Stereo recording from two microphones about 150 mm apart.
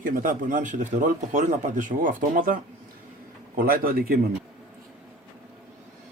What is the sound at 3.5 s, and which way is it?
Speech, 80° right.